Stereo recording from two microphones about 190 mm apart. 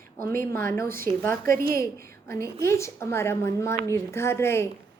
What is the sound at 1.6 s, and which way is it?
Speech, 50° right (ahead or behind).